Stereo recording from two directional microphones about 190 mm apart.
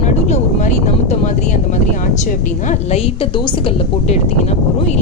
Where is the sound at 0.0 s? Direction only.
40° left (ahead or behind).